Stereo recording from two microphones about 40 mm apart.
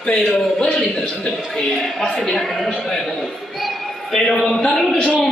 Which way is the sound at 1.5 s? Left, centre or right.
Centre.